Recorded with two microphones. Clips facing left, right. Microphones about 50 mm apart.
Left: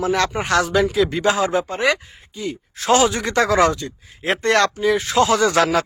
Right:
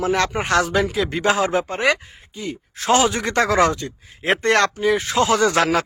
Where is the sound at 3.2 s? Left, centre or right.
Right.